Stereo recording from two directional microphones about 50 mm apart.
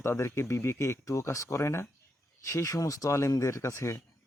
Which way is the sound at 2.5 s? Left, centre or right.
Left.